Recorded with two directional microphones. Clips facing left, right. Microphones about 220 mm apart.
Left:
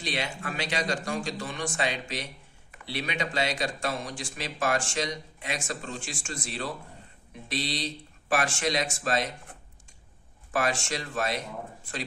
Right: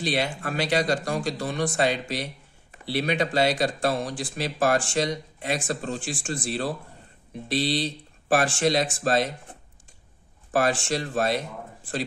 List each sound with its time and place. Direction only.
0.0 s speech: 35° right (ahead or behind)
10.5 s speech: 35° right (ahead or behind)